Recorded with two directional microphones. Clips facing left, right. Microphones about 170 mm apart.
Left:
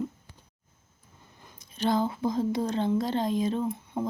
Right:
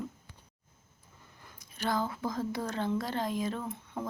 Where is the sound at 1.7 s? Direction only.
20° left (ahead or behind).